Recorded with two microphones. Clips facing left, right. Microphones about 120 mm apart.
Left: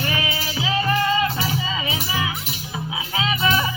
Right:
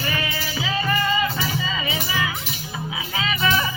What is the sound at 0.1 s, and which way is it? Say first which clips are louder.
Music: left 1 dB; 20° left (ahead or behind).